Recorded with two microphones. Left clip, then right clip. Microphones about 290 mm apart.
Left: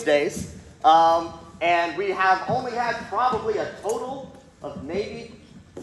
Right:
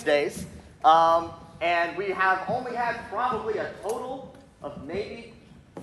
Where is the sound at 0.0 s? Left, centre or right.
Centre.